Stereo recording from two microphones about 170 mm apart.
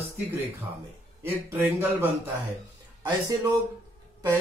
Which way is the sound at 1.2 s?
15° right (ahead or behind).